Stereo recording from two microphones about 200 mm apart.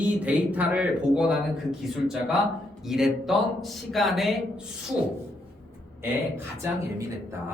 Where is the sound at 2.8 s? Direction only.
Centre (ahead or behind).